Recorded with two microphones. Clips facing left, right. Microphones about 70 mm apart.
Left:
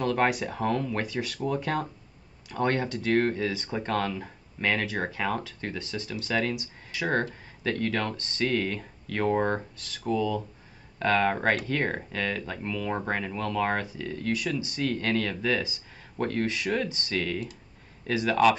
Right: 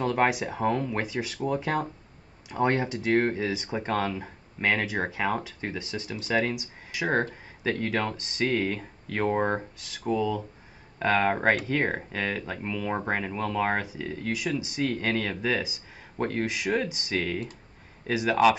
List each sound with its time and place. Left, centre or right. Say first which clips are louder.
0.0 s speech: right 1 dB; centre